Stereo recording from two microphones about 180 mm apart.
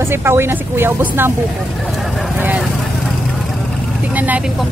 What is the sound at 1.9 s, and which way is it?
Vehicle, centre (ahead or behind).